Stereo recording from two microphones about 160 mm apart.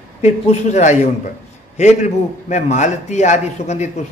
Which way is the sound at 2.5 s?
45° left (ahead or behind).